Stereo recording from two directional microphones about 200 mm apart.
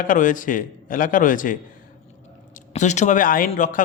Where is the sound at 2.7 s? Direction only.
35° left (ahead or behind).